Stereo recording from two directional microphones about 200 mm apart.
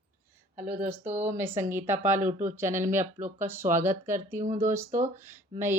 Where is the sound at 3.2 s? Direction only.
40° right (ahead or behind).